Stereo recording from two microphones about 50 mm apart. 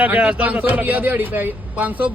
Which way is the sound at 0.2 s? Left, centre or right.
Right.